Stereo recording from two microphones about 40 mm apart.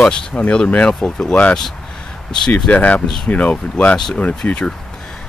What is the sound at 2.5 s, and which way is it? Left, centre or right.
Speech, left.